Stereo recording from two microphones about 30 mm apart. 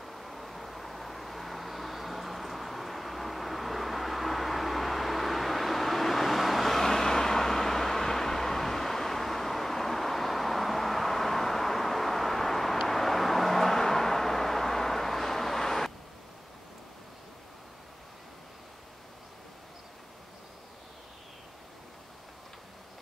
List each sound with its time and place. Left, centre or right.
0.0 s vehicle: centre